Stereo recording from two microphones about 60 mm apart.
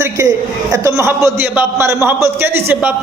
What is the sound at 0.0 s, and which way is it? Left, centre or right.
A man's voice, right.